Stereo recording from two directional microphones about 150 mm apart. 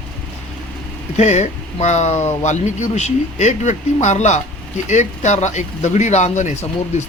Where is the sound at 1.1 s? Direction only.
50° left (ahead or behind).